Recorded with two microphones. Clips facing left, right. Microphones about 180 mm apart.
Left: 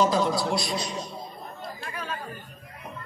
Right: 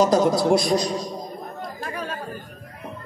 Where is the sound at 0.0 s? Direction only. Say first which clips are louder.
Right 5 dB; 45° right (ahead or behind).